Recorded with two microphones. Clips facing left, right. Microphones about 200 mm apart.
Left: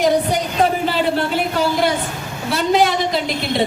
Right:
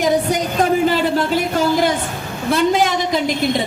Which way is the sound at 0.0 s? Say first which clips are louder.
Even; 45° right (ahead or behind).